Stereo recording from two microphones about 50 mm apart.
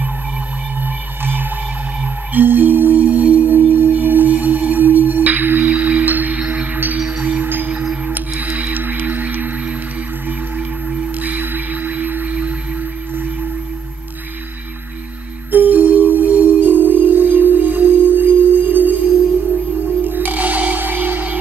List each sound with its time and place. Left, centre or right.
0.8 s music: right
3.0 s singing bowl: right
10.9 s whale vocalization: right
13.1 s singing bowl: right
15.5 s music: right